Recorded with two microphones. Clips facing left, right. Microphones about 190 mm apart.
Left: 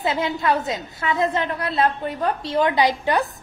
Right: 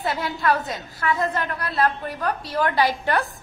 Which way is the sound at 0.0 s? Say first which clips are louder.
Left 2 dB; 20° left (ahead or behind).